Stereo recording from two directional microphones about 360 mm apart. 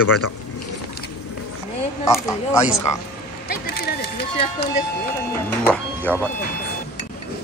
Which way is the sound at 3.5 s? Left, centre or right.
Left.